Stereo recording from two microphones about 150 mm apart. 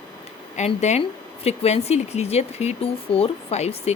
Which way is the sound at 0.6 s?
50° left (ahead or behind).